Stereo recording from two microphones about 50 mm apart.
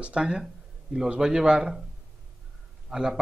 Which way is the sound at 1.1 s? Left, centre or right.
Centre.